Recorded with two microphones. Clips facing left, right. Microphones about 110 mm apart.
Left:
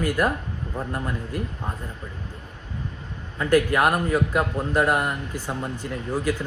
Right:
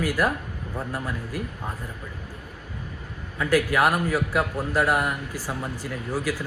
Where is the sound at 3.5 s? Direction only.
5° right (ahead or behind).